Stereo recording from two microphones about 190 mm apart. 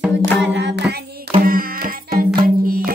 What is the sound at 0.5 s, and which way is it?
Music, 65° right (ahead or behind).